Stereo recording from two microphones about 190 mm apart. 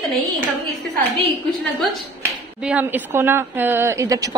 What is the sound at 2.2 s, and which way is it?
A woman's voice, 10° right (ahead or behind).